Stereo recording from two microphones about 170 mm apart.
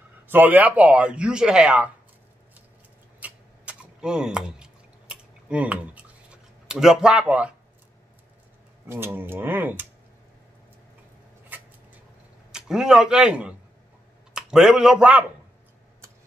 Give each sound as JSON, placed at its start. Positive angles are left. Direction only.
{"t": 0.3, "sound": "speech", "side_deg": -10}
{"t": 3.2, "sound": "a sound", "side_deg": -10}
{"t": 6.7, "sound": "a man's voice", "side_deg": -5}
{"t": 8.8, "sound": "speech", "side_deg": -15}
{"t": 11.4, "sound": "a sound", "side_deg": -10}
{"t": 12.5, "sound": "a man's voice", "side_deg": -5}